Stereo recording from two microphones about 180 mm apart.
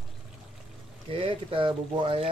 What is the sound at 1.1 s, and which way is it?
Speech, 30° right (ahead or behind).